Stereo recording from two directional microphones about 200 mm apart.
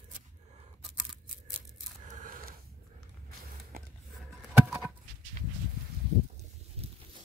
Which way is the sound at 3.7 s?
45° right (ahead or behind).